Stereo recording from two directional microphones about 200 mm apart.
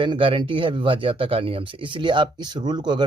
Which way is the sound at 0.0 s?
25° right (ahead or behind).